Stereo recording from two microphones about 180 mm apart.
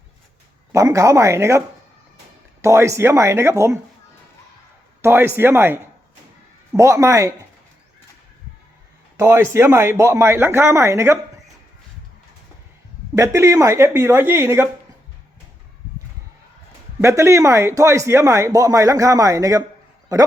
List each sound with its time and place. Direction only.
0.7 s speech: 15° right (ahead or behind)
5.0 s speech: 15° right (ahead or behind)
9.1 s speech: 15° right (ahead or behind)
13.1 s speech: 15° right (ahead or behind)
17.0 s a man's voice: 15° right (ahead or behind)